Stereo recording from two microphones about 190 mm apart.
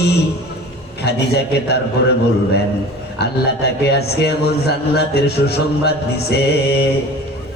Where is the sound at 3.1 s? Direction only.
60° left (ahead or behind).